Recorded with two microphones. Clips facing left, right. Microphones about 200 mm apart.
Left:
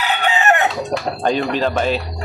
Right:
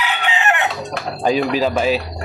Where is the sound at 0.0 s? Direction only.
40° left (ahead or behind).